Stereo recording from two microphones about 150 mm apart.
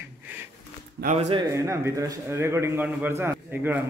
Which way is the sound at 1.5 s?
20° right (ahead or behind).